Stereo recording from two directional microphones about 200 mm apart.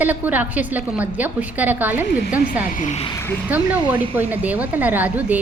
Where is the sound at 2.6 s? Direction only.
40° left (ahead or behind).